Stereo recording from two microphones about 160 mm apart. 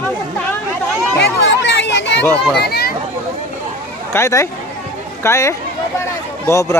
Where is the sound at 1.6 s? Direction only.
90° left.